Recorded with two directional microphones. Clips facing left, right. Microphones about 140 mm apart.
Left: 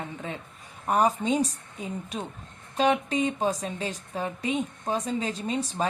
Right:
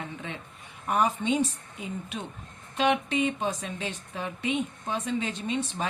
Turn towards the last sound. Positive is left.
turn(degrees=40)  # may be behind; listen again after turning